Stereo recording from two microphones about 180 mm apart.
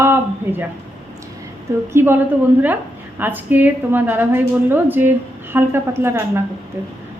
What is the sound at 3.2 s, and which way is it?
A woman's voice, 10° right (ahead or behind).